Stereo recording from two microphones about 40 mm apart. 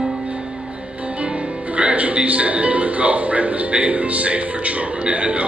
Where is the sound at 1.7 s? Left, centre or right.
Right.